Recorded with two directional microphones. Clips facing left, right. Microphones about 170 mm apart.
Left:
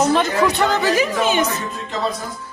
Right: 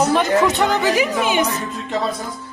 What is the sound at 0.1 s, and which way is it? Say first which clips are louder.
A man's voice: right 1 dB; 20° right (ahead or behind).